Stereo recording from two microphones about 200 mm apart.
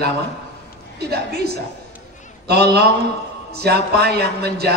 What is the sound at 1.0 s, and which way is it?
Speech, 55° right (ahead or behind).